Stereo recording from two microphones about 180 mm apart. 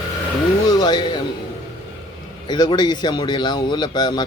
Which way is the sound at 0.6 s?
25° left (ahead or behind).